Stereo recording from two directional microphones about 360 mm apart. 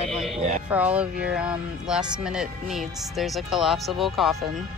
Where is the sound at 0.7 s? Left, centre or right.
Centre.